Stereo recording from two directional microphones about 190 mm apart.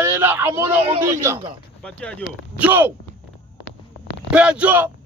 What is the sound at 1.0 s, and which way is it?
Speech, 15° right (ahead or behind).